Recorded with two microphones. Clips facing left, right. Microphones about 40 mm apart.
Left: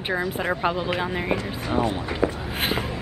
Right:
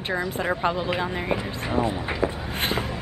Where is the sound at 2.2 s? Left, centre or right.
Centre.